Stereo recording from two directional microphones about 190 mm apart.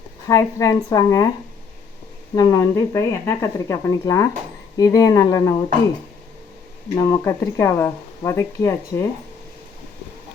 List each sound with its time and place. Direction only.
0.3 s speech: 15° left (ahead or behind)
2.3 s speech: 15° left (ahead or behind)
6.9 s speech: 15° left (ahead or behind)